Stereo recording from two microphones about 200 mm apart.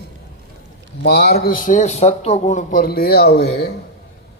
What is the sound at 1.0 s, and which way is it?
A man's voice, 55° left (ahead or behind).